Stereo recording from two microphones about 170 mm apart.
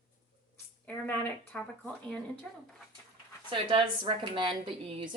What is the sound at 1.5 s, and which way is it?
Speech, 10° left (ahead or behind).